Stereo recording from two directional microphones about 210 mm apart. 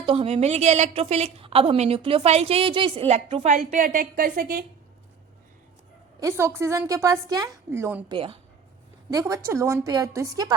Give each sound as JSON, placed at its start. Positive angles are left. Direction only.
{"t": 0.0, "sound": "a woman's voice", "side_deg": -25}
{"t": 6.1, "sound": "a woman's voice", "side_deg": -15}
{"t": 8.1, "sound": "a woman's voice", "side_deg": -25}